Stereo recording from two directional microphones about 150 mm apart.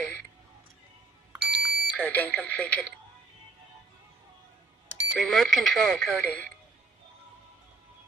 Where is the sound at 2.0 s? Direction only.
10° left (ahead or behind).